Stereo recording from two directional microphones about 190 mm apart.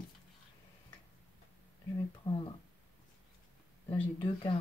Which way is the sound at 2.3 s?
25° left (ahead or behind).